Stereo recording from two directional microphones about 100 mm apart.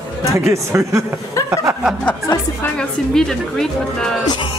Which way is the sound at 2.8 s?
5° left (ahead or behind).